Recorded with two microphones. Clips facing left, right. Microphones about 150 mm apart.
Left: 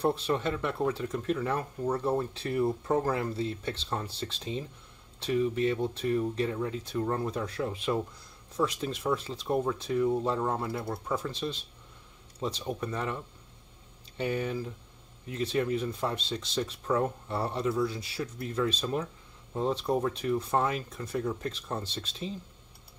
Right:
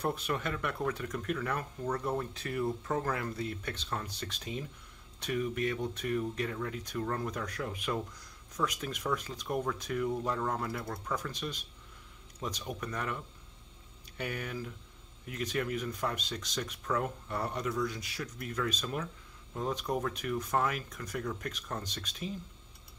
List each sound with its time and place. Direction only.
0.0 s speech: 30° left (ahead or behind)